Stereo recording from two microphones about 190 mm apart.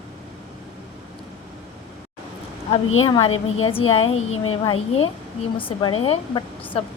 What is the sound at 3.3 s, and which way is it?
Speech, 90° left.